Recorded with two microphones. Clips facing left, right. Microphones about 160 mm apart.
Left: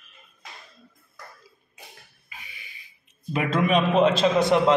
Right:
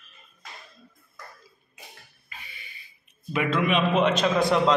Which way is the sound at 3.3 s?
40° left (ahead or behind).